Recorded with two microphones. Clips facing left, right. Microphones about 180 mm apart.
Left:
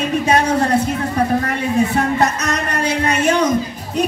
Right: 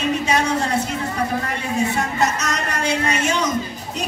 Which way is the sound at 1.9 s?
55° left (ahead or behind).